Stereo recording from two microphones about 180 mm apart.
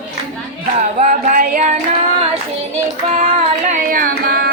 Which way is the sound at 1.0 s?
50° right (ahead or behind).